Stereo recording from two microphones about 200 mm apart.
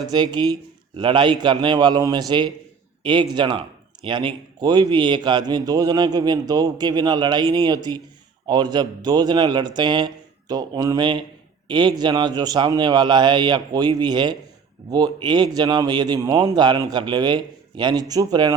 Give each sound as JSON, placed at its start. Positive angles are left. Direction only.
{"t": 0.1, "sound": "a man's voice", "side_deg": -20}